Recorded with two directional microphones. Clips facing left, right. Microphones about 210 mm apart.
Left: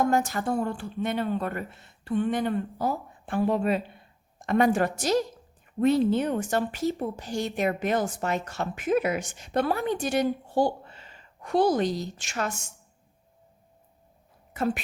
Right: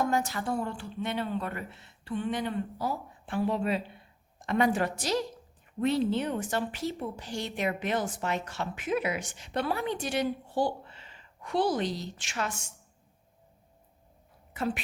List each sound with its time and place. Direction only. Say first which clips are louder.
0.0 s speech: left 4 dB; 50° left (ahead or behind)
14.5 s a woman's voice: left 4 dB; 45° left (ahead or behind)